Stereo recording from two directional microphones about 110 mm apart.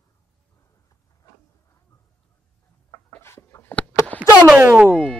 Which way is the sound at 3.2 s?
25° left (ahead or behind).